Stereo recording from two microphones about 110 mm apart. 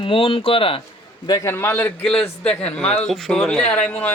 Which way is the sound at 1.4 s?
20° left (ahead or behind).